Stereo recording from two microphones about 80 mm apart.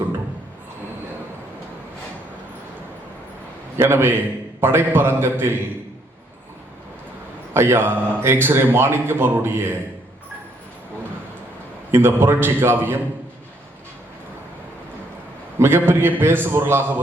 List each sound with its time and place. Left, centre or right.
3.8 s a man's voice: right
7.5 s a man's voice: right
11.9 s a man's voice: right
15.5 s a man's voice: right